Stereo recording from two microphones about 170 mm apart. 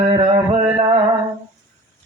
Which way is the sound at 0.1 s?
30° right (ahead or behind).